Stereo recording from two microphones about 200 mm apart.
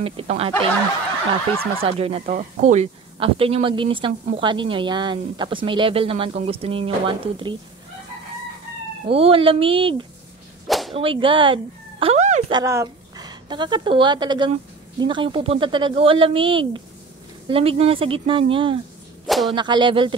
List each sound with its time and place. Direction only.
0.0 s speech: 30° right (ahead or behind)
1.8 s speech: 30° right (ahead or behind)
9.1 s speech: 30° right (ahead or behind)
10.7 s whip: centre (ahead or behind)
11.0 s speech: 25° right (ahead or behind)
12.5 s a woman's voice: 15° right (ahead or behind)
19.2 s whip: centre (ahead or behind)
19.5 s speech: 20° right (ahead or behind)